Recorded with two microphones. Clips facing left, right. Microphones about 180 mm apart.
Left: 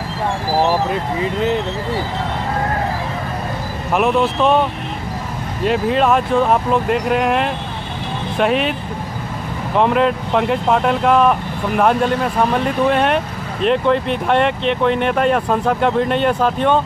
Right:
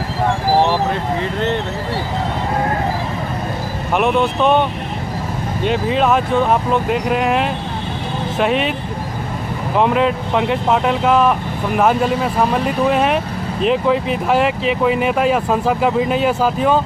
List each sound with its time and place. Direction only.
1.2 s speech: 5° left (ahead or behind)
3.9 s speech: centre (ahead or behind)
9.8 s speech: centre (ahead or behind)